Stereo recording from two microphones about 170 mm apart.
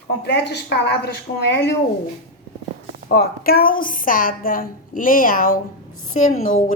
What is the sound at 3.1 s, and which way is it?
A woman's voice, 60° left (ahead or behind).